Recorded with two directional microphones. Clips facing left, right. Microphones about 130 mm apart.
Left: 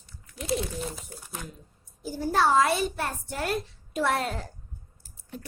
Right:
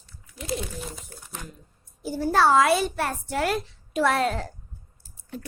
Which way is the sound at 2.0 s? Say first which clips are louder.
Right 3 dB; 70° right (ahead or behind).